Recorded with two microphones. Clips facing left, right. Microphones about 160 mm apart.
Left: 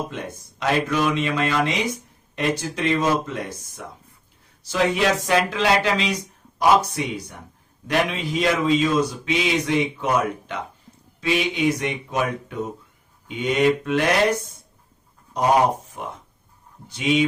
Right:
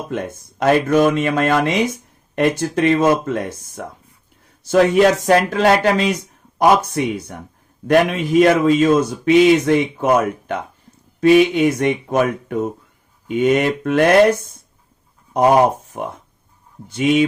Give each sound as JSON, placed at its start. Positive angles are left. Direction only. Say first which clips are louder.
{"t": 0.6, "sound": "speech", "louder": "right 8 dB", "side_deg": -50}
{"t": 15.9, "sound": "speech", "louder": "right 6 dB", "side_deg": -55}